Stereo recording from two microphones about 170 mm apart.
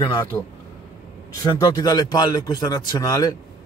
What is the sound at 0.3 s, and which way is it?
Speech, 5° left (ahead or behind).